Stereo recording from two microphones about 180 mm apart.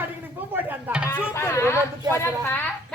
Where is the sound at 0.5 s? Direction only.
10° right (ahead or behind).